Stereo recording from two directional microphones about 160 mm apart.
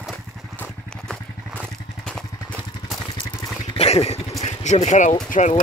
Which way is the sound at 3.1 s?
30° left (ahead or behind).